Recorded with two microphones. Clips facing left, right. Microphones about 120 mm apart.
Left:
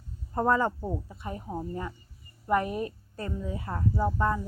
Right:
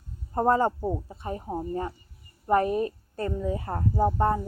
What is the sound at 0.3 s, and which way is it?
Speech, 35° right (ahead or behind).